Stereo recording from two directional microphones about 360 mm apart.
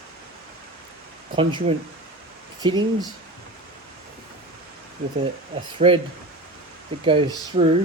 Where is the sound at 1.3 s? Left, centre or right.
Centre.